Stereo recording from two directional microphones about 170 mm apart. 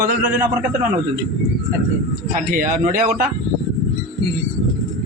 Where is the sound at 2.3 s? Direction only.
50° right (ahead or behind).